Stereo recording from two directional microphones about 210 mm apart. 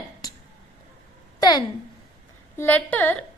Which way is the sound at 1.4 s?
20° left (ahead or behind).